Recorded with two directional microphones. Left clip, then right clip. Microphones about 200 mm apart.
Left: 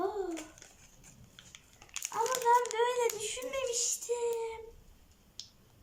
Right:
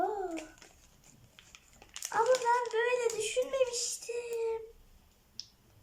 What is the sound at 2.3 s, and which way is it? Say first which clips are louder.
Speech: left 2 dB; 40° left (ahead or behind).